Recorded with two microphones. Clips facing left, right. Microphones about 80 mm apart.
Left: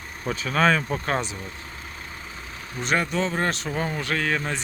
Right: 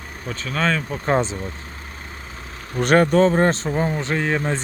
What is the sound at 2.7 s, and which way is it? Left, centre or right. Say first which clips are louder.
Speech: right 9 dB; right.